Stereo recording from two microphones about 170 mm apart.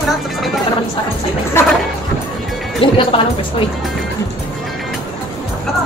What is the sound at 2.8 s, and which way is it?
Speech, 30° left (ahead or behind).